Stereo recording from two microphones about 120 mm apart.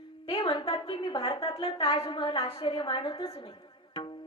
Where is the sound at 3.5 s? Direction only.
40° left (ahead or behind).